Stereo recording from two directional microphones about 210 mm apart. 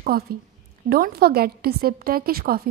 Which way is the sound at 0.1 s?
45° right (ahead or behind).